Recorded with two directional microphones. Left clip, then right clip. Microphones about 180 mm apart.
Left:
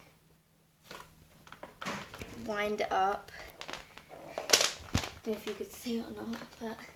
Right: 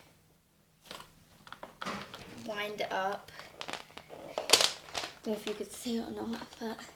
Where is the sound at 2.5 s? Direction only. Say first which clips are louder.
Left 4 dB; 30° left (ahead or behind).